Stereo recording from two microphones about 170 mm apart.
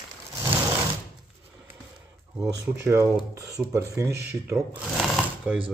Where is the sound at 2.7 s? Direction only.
15° right (ahead or behind).